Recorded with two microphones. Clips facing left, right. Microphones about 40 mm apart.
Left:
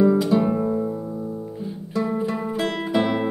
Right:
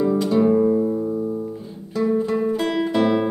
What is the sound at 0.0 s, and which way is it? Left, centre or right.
Music, centre.